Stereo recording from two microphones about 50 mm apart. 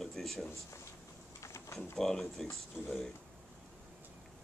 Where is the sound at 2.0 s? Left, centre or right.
Centre.